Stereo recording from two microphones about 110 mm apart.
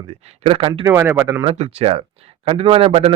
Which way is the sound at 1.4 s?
65° right (ahead or behind).